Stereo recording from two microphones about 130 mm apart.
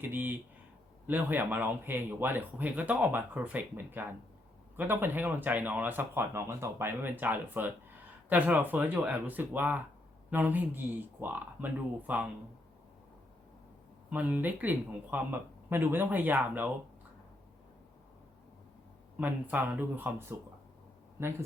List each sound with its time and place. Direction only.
0.0 s speech: 15° right (ahead or behind)
14.1 s speech: 15° right (ahead or behind)
19.2 s speech: 15° right (ahead or behind)